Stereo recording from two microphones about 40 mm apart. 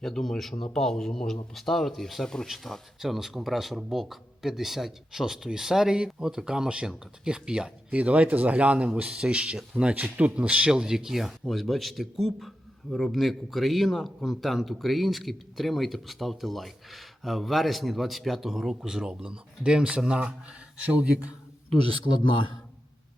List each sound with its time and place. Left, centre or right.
0.0 s speech: centre
2.2 s speech: centre
2.5 s a man's voice: centre
3.0 s a man's voice: centre
7.9 s speech: right
10.7 s speech: centre
11.4 s a man's voice: centre; by 21.0 s right